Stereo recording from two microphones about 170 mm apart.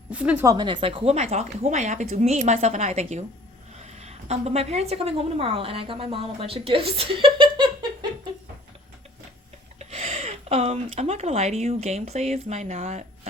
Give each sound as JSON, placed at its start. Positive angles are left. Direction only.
{"t": 0.1, "sound": "a woman's voice", "side_deg": -10}
{"t": 0.4, "sound": "a woman's voice", "side_deg": -25}
{"t": 7.3, "sound": "a sound", "side_deg": -25}
{"t": 9.7, "sound": "speech", "side_deg": -35}